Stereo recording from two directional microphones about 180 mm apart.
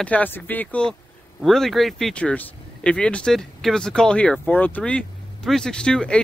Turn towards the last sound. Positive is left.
turn(degrees=5)  # may be behind; listen again after turning